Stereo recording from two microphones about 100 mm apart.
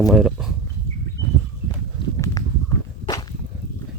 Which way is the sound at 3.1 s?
45° left (ahead or behind).